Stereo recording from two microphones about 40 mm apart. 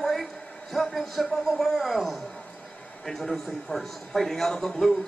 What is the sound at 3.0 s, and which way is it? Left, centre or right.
A man's voice, centre.